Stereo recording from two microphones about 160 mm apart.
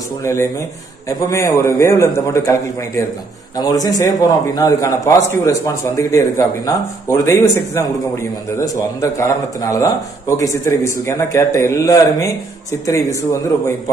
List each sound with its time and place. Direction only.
0.2 s a man's voice: 20° left (ahead or behind)
3.5 s a man's voice: 25° left (ahead or behind)